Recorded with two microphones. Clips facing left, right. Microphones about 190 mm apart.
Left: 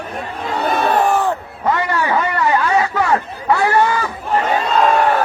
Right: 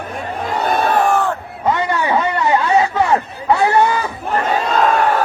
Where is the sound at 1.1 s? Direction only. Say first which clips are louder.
Even; 15° left (ahead or behind).